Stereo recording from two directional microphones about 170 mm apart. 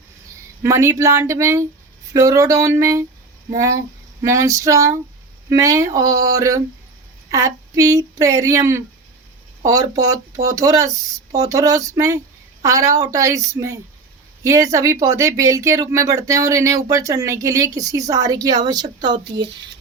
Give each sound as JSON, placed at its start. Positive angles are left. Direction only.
{"t": 0.6, "sound": "speech", "side_deg": -15}
{"t": 4.2, "sound": "speech", "side_deg": -20}
{"t": 10.4, "sound": "speech", "side_deg": -20}